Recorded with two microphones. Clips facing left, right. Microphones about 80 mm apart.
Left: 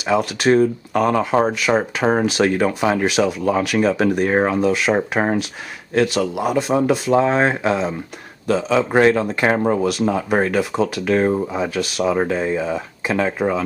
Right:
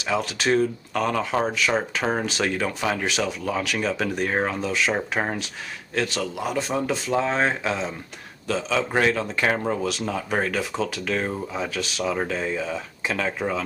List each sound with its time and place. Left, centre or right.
0.0 s speech: centre
4.3 s speech: left
4.6 s speech: centre
5.2 s speech: centre
5.9 s speech: centre
9.4 s speech: centre
9.8 s speech: centre
11.1 s speech: left
11.4 s speech: centre